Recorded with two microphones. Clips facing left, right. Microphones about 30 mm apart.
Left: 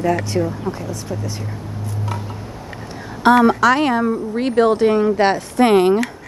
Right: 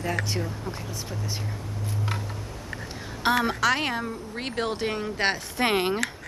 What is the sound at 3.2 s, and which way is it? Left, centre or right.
Speech, centre.